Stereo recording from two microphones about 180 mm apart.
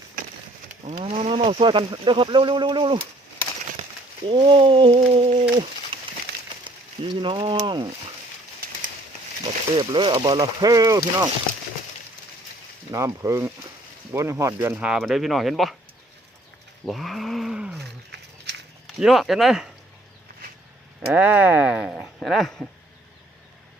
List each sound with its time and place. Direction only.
0.9 s speech: 40° right (ahead or behind)
1.1 s speech: 30° right (ahead or behind)
4.3 s speech: 25° right (ahead or behind)
5.4 s a sound: 30° right (ahead or behind)
6.3 s a sound: 65° right (ahead or behind)
6.7 s speech: 25° right (ahead or behind)
9.4 s speech: 25° right (ahead or behind)
12.9 s speech: 15° right (ahead or behind); by 15.7 s centre (ahead or behind)
16.8 s roaring cats: centre (ahead or behind)
18.9 s speech: centre (ahead or behind)
21.1 s speech: 10° right (ahead or behind)